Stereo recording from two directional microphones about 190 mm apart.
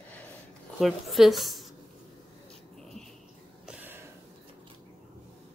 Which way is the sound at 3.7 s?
10° right (ahead or behind).